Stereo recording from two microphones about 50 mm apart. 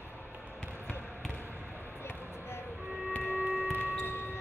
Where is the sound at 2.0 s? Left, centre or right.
Left.